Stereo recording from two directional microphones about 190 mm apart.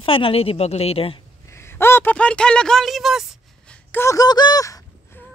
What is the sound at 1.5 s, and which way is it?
Speech, 15° left (ahead or behind).